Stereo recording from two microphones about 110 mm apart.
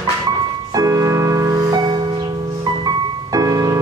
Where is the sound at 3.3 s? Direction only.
35° right (ahead or behind).